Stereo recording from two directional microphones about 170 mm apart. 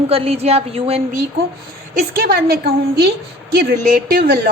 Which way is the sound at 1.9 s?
65° right (ahead or behind).